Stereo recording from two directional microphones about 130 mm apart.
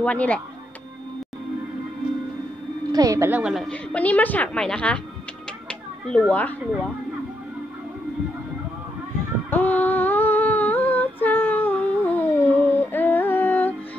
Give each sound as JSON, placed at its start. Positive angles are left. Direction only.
{"t": 0.0, "sound": "a woman's voice", "side_deg": 10}
{"t": 2.9, "sound": "a woman's voice", "side_deg": -30}
{"t": 3.3, "sound": "a woman's voice", "side_deg": -10}
{"t": 3.5, "sound": "a woman's voice", "side_deg": 5}
{"t": 5.7, "sound": "a sound", "side_deg": 5}
{"t": 9.5, "sound": "humming", "side_deg": 15}